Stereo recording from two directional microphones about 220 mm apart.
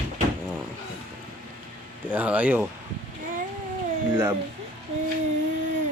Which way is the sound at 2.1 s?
5° right (ahead or behind).